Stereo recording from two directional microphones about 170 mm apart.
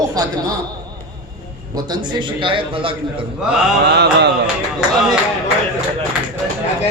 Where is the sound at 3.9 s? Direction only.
80° right.